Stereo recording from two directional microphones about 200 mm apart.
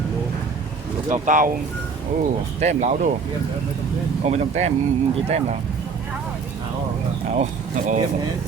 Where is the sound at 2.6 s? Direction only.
35° right (ahead or behind).